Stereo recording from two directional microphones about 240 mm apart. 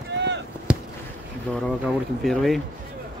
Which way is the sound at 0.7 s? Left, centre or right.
Centre.